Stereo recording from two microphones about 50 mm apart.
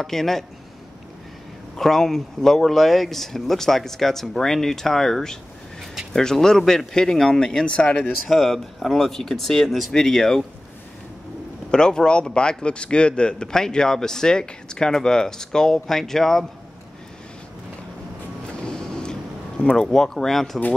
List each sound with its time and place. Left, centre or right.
0.0 s a man's voice: centre
1.8 s a man's voice: centre; by 8.1 s left
8.3 s speech: centre
11.7 s a man's voice: centre
18.6 s a sound: centre
19.9 s a man's voice: centre